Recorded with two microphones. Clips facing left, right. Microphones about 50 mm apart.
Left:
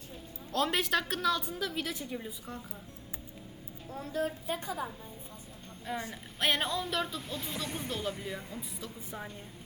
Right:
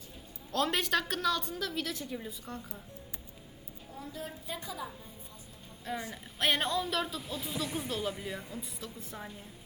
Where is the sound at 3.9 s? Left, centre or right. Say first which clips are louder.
Left 8 dB; left.